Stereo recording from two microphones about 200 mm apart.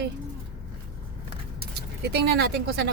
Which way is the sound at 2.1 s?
55° right (ahead or behind).